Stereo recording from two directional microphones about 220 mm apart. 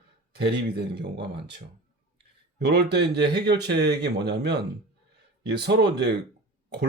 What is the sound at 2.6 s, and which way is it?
Speech, 50° right (ahead or behind).